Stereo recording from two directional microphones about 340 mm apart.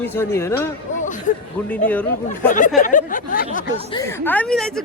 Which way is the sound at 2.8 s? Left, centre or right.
Left.